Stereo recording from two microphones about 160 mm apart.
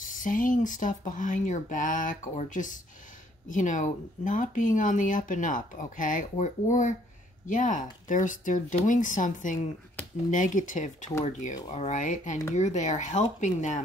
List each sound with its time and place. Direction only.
0.2 s speech: 55° left (ahead or behind)